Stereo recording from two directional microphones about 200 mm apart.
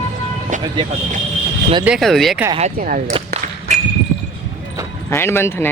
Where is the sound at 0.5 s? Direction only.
40° right (ahead or behind).